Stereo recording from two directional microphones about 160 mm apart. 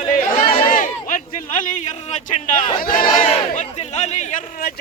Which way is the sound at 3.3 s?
45° left (ahead or behind).